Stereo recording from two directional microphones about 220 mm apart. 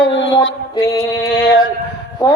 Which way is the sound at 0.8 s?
15° left (ahead or behind).